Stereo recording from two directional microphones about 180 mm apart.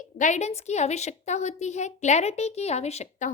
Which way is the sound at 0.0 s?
45° left (ahead or behind).